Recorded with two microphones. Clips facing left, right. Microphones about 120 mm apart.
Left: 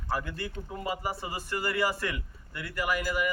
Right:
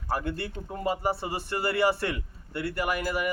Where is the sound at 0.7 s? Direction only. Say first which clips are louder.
Right 6 dB; 35° right (ahead or behind).